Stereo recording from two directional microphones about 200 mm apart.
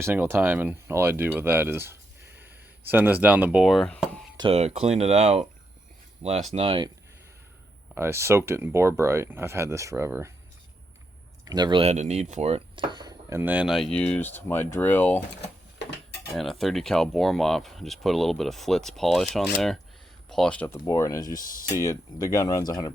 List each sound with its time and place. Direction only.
0.0 s speech: 10° right (ahead or behind)
4.4 s speech: 30° right (ahead or behind)
6.5 s speech: 30° right (ahead or behind)
7.9 s speech: 15° right (ahead or behind)
11.4 s speech: 20° right (ahead or behind); by 15.2 s 10° left (ahead or behind)
16.3 s speech: centre (ahead or behind); by 22.9 s 20° left (ahead or behind)